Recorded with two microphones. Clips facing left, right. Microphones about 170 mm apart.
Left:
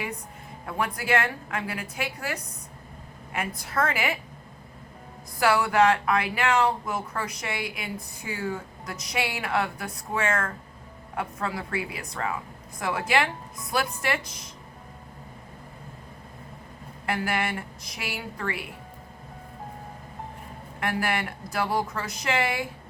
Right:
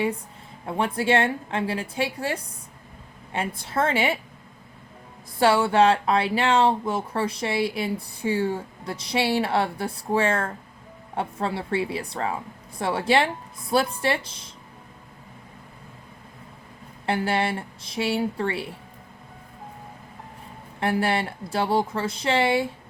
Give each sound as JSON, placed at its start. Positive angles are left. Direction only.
{"t": 0.6, "sound": "speech", "side_deg": -25}
{"t": 5.4, "sound": "speech", "side_deg": -30}
{"t": 17.1, "sound": "speech", "side_deg": -30}
{"t": 20.7, "sound": "speech", "side_deg": -30}